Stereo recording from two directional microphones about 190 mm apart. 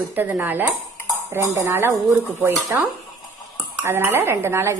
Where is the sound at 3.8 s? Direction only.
10° right (ahead or behind).